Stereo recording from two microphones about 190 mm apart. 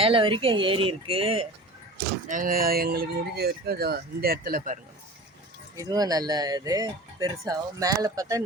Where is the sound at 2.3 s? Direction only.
45° right (ahead or behind).